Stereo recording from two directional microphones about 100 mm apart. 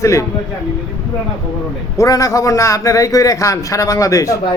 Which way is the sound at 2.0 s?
35° left (ahead or behind).